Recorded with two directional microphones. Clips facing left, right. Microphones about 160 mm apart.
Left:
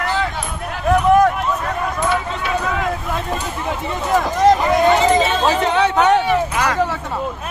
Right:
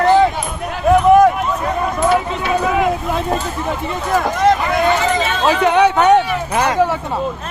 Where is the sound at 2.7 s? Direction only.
15° right (ahead or behind).